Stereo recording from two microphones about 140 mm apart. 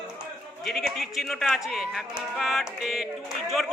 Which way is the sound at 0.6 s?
Centre (ahead or behind).